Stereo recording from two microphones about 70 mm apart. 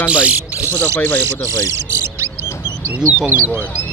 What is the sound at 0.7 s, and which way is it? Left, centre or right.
Music, left.